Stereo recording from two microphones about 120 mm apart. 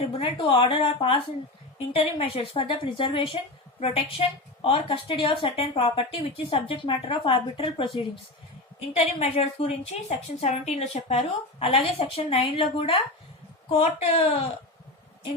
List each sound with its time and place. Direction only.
0.2 s a woman's voice: 45° left (ahead or behind)
3.3 s a woman's voice: 65° left (ahead or behind); by 7.9 s 50° left (ahead or behind)
8.9 s a woman's voice: 55° left (ahead or behind)